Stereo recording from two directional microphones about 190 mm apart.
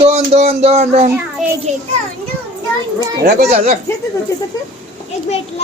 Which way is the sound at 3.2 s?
55° right (ahead or behind).